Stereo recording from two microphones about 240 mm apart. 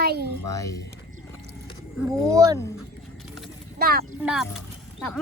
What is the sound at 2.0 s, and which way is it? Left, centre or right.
Speech, centre.